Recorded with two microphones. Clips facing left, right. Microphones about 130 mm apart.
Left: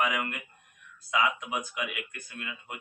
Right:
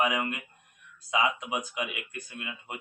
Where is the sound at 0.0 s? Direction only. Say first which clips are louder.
Right 2 dB; 25° right (ahead or behind).